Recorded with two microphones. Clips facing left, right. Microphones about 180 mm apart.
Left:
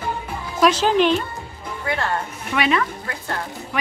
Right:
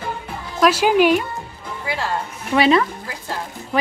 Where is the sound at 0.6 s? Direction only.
10° right (ahead or behind).